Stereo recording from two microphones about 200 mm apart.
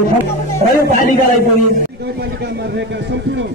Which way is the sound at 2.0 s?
55° right (ahead or behind).